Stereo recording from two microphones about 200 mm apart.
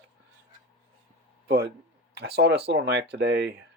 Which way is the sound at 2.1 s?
55° right (ahead or behind).